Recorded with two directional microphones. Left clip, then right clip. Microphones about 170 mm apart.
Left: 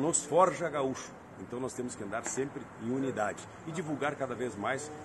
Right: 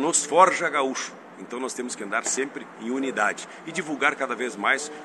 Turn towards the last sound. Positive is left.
turn(degrees=25)  # may be behind; listen again after turning